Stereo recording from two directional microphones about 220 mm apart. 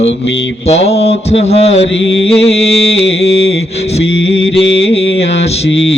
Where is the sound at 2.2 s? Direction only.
25° left (ahead or behind).